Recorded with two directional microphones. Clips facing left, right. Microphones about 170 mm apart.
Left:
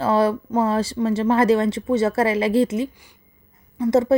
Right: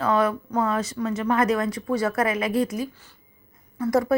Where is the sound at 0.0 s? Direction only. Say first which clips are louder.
Left 3 dB; 30° left (ahead or behind).